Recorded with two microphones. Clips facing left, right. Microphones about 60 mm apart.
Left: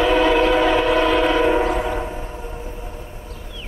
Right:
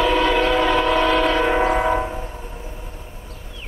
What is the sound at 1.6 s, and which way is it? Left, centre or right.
Train, right.